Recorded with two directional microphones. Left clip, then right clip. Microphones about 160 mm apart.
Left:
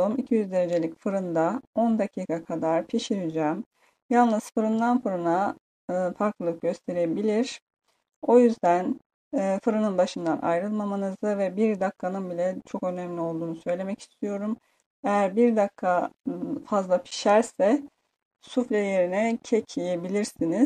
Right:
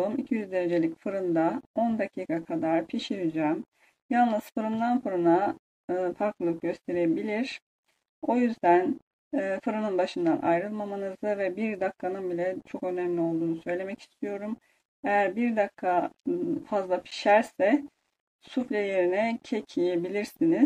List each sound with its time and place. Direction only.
0.0 s speech: 50° left (ahead or behind)